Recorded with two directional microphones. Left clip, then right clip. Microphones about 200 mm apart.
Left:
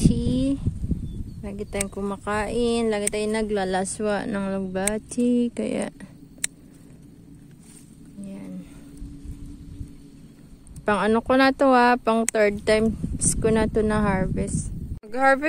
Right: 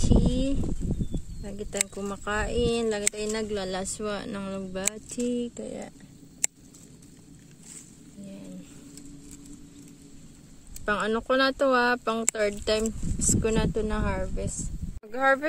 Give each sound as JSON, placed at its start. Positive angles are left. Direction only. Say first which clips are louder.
{"t": 0.3, "sound": "a sound", "louder": "left 4 dB", "side_deg": 10}
{"t": 1.4, "sound": "speech", "louder": "left 3 dB", "side_deg": 5}
{"t": 5.6, "sound": "speech", "louder": "left 10 dB", "side_deg": 30}
{"t": 10.9, "sound": "speech", "louder": "left 5 dB", "side_deg": 15}